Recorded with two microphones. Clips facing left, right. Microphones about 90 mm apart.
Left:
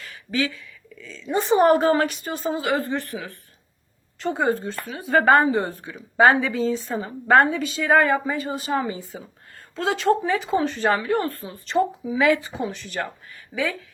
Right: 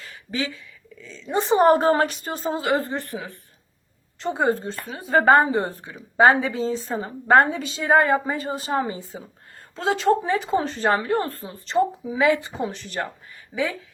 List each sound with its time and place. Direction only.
0.0 s a woman's voice: 25° right (ahead or behind)
3.0 s a woman's voice: 15° right (ahead or behind); by 13.0 s 35° right (ahead or behind)